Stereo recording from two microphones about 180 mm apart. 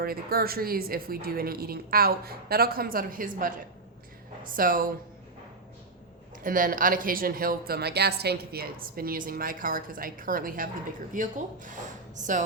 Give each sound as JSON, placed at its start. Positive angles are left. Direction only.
{"t": 0.0, "sound": "a woman's voice", "side_deg": -55}
{"t": 6.4, "sound": "speech", "side_deg": -50}